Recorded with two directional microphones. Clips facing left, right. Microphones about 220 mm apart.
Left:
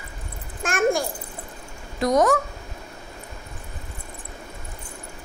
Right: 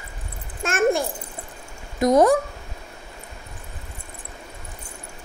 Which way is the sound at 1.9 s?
20° right (ahead or behind).